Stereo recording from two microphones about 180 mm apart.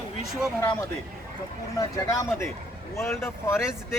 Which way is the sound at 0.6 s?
15° left (ahead or behind).